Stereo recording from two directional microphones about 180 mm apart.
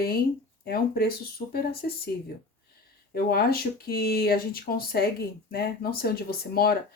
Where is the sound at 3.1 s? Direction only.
60° left (ahead or behind).